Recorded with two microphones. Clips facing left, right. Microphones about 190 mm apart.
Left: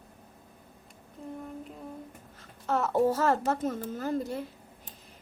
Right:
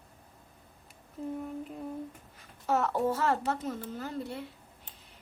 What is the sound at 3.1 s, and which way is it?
A woman's voice, 45° left (ahead or behind).